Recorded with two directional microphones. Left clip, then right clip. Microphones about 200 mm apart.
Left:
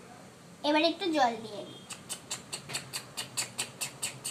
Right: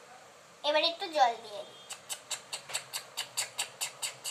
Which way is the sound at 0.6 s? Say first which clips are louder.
Left 2 dB; 20° left (ahead or behind).